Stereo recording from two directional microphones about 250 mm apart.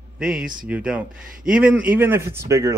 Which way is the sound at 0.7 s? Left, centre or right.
Centre.